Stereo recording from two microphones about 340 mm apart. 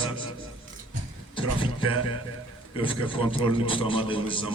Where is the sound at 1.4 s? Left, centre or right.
Centre.